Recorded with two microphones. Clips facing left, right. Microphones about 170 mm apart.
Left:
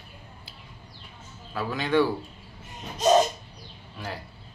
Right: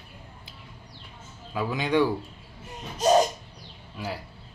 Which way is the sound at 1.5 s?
15° right (ahead or behind).